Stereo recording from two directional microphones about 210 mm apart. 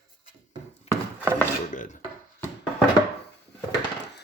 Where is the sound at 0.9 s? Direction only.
30° left (ahead or behind).